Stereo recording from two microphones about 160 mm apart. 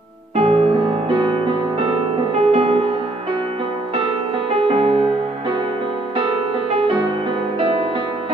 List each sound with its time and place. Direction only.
0.4 s music: 35° right (ahead or behind)
2.3 s music: 35° right (ahead or behind)
4.5 s music: 35° right (ahead or behind)